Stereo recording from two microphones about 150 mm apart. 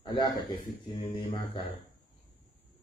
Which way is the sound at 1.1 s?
35° left (ahead or behind).